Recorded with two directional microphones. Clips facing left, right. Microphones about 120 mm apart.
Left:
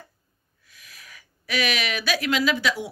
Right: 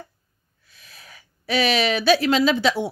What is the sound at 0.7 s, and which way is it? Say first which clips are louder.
Speech: right 1 dB; 30° right (ahead or behind).